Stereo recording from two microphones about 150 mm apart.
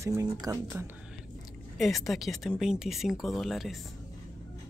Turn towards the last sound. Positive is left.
turn(degrees=0)  # may be behind; listen again after turning